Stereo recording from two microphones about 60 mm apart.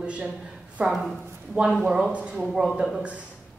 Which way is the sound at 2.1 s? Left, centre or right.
Right.